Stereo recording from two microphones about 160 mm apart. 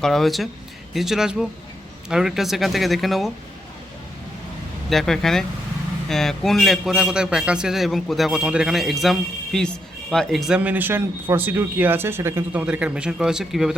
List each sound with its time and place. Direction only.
0.0 s a man's voice: centre (ahead or behind)
4.9 s a man's voice: centre (ahead or behind)